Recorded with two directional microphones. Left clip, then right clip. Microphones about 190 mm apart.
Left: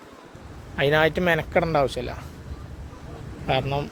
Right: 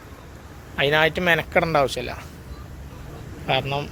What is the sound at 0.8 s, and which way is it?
Speech, 25° left (ahead or behind).